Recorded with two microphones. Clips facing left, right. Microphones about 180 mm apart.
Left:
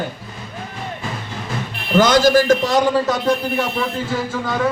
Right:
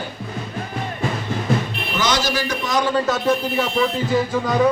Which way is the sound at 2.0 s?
50° left (ahead or behind).